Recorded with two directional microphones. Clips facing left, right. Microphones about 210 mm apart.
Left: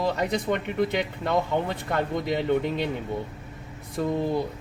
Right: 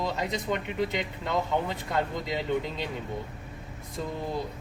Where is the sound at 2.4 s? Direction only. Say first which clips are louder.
Left 6 dB; 60° left (ahead or behind).